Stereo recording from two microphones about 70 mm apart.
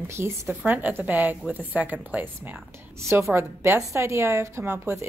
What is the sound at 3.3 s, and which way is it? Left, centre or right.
A woman's voice, right.